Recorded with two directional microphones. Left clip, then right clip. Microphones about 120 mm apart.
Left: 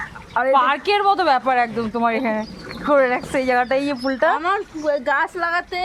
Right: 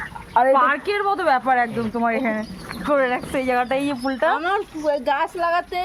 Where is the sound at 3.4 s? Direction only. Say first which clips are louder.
Left 3 dB; 10° left (ahead or behind).